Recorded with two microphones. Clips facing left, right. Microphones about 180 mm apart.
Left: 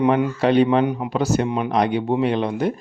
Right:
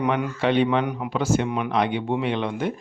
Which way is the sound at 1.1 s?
40° left (ahead or behind).